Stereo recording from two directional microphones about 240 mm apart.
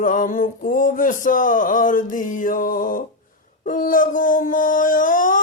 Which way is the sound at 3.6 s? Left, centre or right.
Left.